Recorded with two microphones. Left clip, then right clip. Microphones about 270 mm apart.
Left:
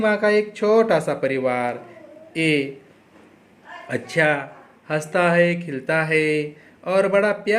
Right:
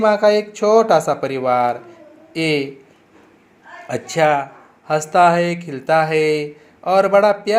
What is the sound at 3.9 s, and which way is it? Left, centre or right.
Speech, centre.